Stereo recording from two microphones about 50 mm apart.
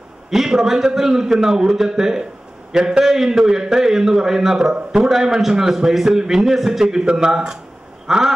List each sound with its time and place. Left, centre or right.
0.3 s a man's voice: centre